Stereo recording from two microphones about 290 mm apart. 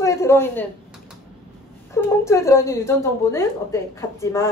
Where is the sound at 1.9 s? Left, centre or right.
Centre.